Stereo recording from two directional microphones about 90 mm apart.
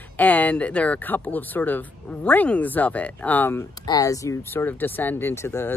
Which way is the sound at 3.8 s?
40° left (ahead or behind).